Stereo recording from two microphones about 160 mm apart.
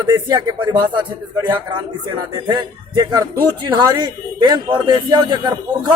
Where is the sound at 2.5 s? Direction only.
25° right (ahead or behind).